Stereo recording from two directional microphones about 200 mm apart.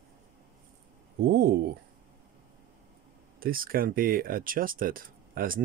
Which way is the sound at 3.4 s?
45° right (ahead or behind).